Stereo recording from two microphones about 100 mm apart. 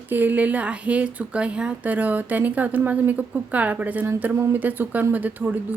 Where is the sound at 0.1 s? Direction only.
15° right (ahead or behind).